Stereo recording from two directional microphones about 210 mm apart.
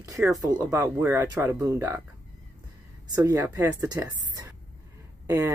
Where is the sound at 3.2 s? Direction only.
15° right (ahead or behind).